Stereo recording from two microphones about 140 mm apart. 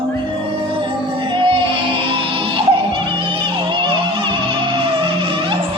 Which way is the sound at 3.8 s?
35° right (ahead or behind).